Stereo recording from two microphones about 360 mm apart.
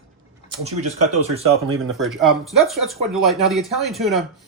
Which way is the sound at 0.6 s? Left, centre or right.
Centre.